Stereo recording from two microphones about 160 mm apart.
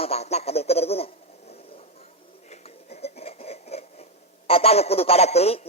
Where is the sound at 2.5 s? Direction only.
40° left (ahead or behind).